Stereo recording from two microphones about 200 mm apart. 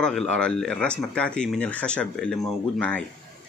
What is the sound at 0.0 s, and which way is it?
Speech, 5° left (ahead or behind).